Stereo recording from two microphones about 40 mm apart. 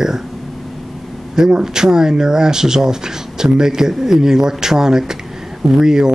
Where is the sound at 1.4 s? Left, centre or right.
Centre.